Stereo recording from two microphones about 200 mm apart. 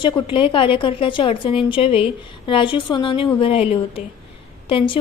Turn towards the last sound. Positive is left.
turn(degrees=25)  # may be behind; listen again after turning